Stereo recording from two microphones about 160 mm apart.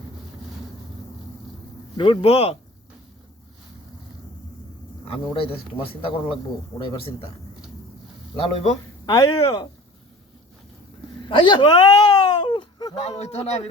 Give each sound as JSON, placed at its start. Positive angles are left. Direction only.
{"t": 2.0, "sound": "speech", "side_deg": 35}
{"t": 5.0, "sound": "speech", "side_deg": 35}
{"t": 8.4, "sound": "speech", "side_deg": 40}
{"t": 9.0, "sound": "speech", "side_deg": 25}
{"t": 11.3, "sound": "a sound", "side_deg": 30}
{"t": 13.0, "sound": "speech", "side_deg": 45}